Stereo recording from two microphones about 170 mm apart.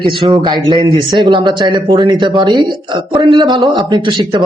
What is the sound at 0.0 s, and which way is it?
Speech, 30° right (ahead or behind).